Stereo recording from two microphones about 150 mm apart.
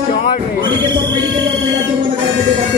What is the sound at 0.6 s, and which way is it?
Speech, 30° right (ahead or behind).